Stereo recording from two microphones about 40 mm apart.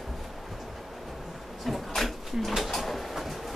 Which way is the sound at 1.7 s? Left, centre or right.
Centre.